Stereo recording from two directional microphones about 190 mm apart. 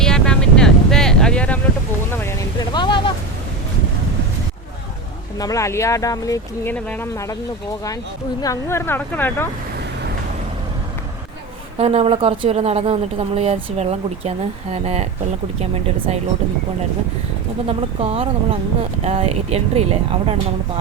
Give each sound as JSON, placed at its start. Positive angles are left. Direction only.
{"t": 0.0, "sound": "vehicle", "side_deg": 5}
{"t": 2.1, "sound": "a sound", "side_deg": 15}
{"t": 2.7, "sound": "a sound", "side_deg": 25}
{"t": 5.4, "sound": "speech", "side_deg": 15}
{"t": 8.4, "sound": "speech", "side_deg": 15}
{"t": 11.8, "sound": "speech", "side_deg": -35}
{"t": 17.7, "sound": "speech", "side_deg": -30}